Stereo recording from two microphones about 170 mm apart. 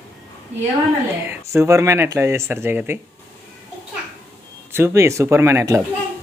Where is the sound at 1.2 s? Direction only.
15° right (ahead or behind).